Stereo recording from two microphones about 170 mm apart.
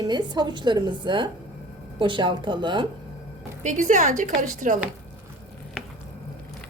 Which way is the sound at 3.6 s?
45° right (ahead or behind).